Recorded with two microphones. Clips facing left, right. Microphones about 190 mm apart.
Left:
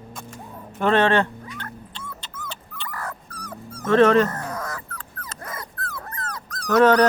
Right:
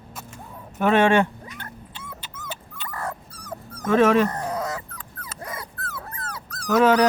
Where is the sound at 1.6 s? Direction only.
10° right (ahead or behind).